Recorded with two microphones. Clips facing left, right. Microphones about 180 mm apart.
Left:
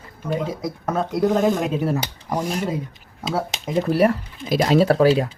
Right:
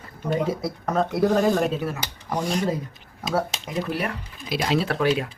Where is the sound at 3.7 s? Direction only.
40° left (ahead or behind).